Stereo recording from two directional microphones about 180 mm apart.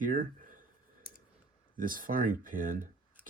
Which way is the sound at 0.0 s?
50° right (ahead or behind).